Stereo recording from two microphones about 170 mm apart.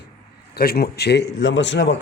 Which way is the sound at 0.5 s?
65° left (ahead or behind).